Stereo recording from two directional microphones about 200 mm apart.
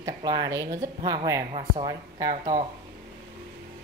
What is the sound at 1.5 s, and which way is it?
Speech, 30° right (ahead or behind).